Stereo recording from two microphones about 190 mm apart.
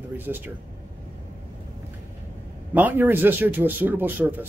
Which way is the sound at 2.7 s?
10° right (ahead or behind).